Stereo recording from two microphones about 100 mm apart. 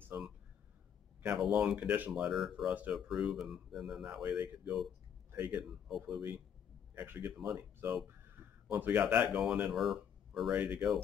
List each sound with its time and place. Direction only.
0.1 s a sound: 20° right (ahead or behind)
1.2 s speech: 5° right (ahead or behind)
2.2 s speech: 5° right (ahead or behind)
5.9 s speech: 5° right (ahead or behind)
7.0 s speech: 15° right (ahead or behind)
7.3 s speech: 5° right (ahead or behind)
7.8 s speech: 25° right (ahead or behind)
9.3 s speech: 5° right (ahead or behind)
10.5 s speech: 15° right (ahead or behind)